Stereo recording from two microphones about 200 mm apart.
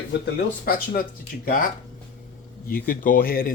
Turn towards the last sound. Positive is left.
turn(degrees=45)  # may be behind; listen again after turning